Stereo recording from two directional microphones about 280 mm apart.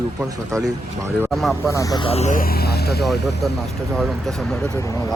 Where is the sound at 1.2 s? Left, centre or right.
Centre; by 3.0 s left.